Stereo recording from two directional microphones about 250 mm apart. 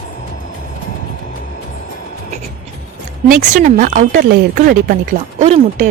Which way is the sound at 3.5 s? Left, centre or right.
Right.